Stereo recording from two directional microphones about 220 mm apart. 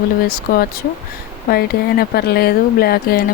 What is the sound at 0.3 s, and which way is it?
Speech, 40° left (ahead or behind).